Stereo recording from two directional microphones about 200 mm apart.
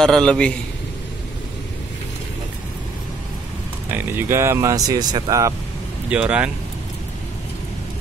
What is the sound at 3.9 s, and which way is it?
Speech, 10° right (ahead or behind).